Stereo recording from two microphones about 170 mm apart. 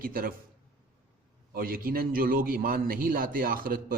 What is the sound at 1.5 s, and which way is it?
A man's voice, 60° right (ahead or behind).